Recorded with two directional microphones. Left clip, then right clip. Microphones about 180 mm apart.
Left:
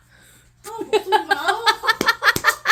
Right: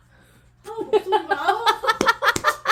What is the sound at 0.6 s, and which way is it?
Speech, 15° left (ahead or behind).